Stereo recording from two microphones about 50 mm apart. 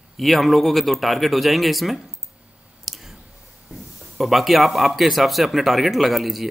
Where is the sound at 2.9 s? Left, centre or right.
Centre.